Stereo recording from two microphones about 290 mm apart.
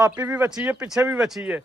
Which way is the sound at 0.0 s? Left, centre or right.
Centre.